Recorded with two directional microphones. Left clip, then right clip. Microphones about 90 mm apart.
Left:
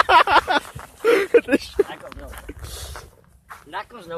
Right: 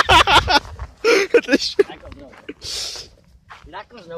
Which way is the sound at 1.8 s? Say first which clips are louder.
Left 2 dB; 5° left (ahead or behind).